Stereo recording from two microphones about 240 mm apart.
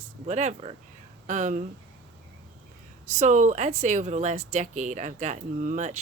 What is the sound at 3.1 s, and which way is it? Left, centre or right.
Speech, right.